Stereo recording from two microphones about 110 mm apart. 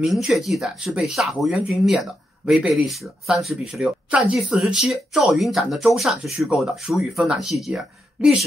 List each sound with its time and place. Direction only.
0.0 s speech: centre (ahead or behind)